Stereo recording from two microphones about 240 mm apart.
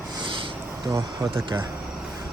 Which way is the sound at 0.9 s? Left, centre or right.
Centre.